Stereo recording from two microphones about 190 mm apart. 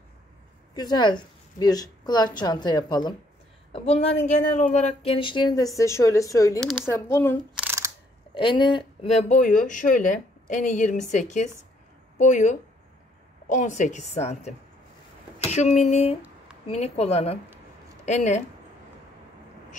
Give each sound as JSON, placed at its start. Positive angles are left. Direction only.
{"t": 0.7, "sound": "speech", "side_deg": 20}
{"t": 6.6, "sound": "speech", "side_deg": -5}
{"t": 6.9, "sound": "speech", "side_deg": 15}
{"t": 7.5, "sound": "camera", "side_deg": -10}
{"t": 8.4, "sound": "speech", "side_deg": 25}
{"t": 15.3, "sound": "a sound", "side_deg": 35}
{"t": 16.6, "sound": "speech", "side_deg": 35}